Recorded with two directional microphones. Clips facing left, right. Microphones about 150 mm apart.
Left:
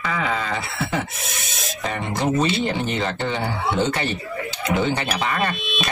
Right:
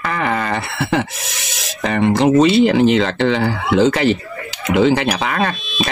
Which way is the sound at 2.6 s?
90° right.